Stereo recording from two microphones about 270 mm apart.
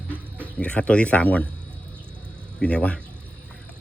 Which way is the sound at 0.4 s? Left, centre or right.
Centre.